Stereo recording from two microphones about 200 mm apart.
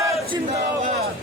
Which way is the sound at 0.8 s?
40° right (ahead or behind).